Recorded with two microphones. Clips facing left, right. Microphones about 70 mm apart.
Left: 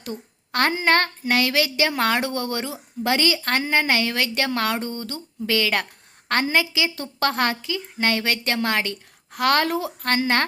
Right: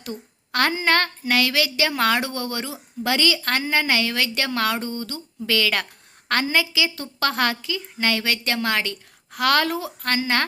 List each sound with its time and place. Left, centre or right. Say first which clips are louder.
0.0 s a woman's voice: left 1 dB; left